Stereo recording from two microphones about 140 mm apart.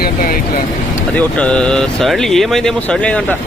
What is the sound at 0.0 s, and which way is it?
Vehicle, 80° left.